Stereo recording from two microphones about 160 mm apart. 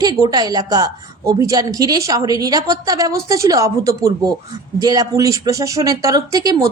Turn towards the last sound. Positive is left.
turn(degrees=-20)  # may be behind; listen again after turning